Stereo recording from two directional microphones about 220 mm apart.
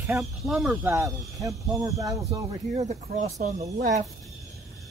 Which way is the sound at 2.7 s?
35° right (ahead or behind).